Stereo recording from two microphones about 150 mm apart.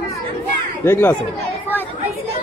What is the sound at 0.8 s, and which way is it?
Speech, 15° left (ahead or behind).